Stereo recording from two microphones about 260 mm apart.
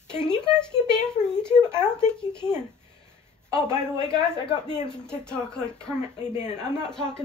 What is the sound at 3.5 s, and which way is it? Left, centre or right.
Speech, centre.